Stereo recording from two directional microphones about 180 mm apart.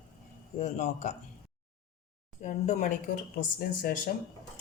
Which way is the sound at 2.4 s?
45° left (ahead or behind).